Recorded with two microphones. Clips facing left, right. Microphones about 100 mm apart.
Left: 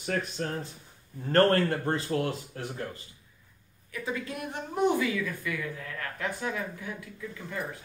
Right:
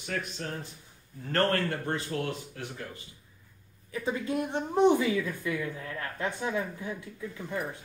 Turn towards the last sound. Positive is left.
turn(degrees=-25)  # may be behind; listen again after turning